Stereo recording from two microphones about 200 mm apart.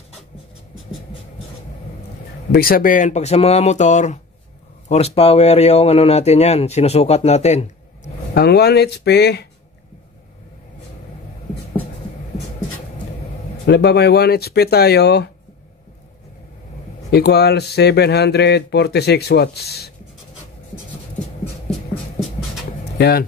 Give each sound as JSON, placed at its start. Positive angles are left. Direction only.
{"t": 2.5, "sound": "speech", "side_deg": 50}
{"t": 8.0, "sound": "speech", "side_deg": 55}
{"t": 13.7, "sound": "speech", "side_deg": 55}
{"t": 17.1, "sound": "speech", "side_deg": 55}
{"t": 21.9, "sound": "a sound", "side_deg": 0}
{"t": 22.9, "sound": "speech", "side_deg": 55}